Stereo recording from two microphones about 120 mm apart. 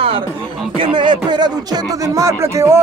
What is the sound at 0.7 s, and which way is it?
Speech, 40° right (ahead or behind).